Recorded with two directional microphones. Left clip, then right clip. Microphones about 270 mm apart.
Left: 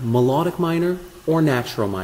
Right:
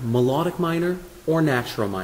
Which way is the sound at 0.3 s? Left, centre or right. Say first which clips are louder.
Left 3 dB; centre.